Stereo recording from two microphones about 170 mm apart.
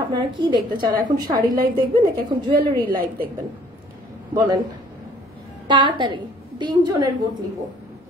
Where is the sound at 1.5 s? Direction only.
55° right (ahead or behind).